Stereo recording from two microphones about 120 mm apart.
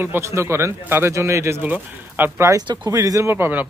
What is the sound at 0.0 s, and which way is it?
Speech, 20° right (ahead or behind).